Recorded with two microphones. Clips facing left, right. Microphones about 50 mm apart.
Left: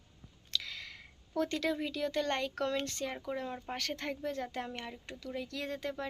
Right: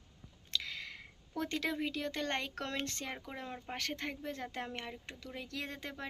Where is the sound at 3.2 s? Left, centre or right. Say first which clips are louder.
Left 5 dB; right.